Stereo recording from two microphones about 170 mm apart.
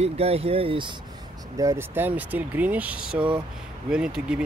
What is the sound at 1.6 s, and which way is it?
Speech, 15° right (ahead or behind).